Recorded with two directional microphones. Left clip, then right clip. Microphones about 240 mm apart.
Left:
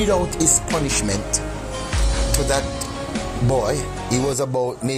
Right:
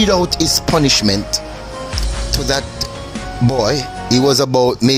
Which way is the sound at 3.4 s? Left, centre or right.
Right.